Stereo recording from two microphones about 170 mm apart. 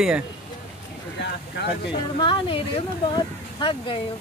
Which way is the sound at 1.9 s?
30° left (ahead or behind).